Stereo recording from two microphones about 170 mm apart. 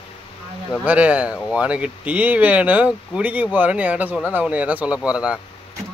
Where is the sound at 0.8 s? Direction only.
10° right (ahead or behind).